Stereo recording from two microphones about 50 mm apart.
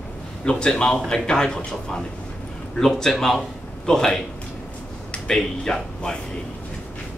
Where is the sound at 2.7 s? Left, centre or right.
Centre.